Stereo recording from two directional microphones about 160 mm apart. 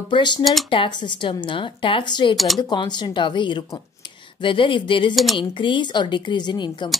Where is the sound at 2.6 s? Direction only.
25° left (ahead or behind).